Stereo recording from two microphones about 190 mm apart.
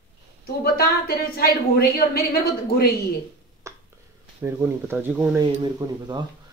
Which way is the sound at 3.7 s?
15° right (ahead or behind).